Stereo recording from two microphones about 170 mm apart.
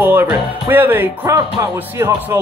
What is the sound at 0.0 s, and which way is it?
Speech, 10° right (ahead or behind).